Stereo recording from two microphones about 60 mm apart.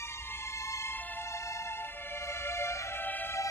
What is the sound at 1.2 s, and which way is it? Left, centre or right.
Music, left.